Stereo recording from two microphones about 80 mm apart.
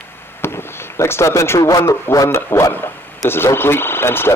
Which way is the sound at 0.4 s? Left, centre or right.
Left.